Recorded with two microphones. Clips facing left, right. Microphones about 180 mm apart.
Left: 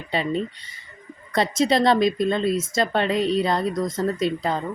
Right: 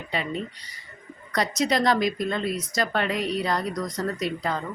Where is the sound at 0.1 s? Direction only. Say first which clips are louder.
Left 6 dB; 30° left (ahead or behind).